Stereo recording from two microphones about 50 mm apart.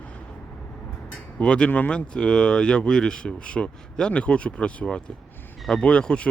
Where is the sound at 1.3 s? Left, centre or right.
Left.